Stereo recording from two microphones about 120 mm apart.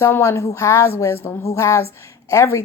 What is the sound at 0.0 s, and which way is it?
A woman's voice, 20° left (ahead or behind).